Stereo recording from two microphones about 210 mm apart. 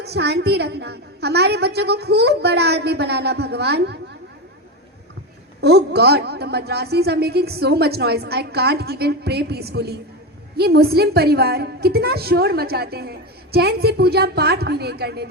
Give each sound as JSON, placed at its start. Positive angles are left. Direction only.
{"t": 0.0, "sound": "a woman's voice", "side_deg": -50}
{"t": 5.5, "sound": "a woman's voice", "side_deg": -50}